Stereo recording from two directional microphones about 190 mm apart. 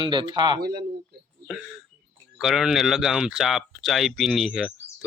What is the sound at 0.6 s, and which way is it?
Speech, 55° right (ahead or behind).